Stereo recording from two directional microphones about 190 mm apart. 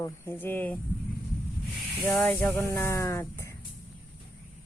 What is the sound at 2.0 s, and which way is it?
Speech, 10° left (ahead or behind).